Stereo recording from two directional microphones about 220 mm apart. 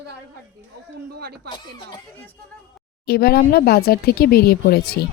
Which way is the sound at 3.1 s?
45° left (ahead or behind).